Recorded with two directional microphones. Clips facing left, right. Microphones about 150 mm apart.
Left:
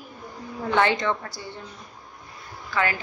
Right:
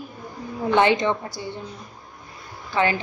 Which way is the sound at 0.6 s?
20° right (ahead or behind).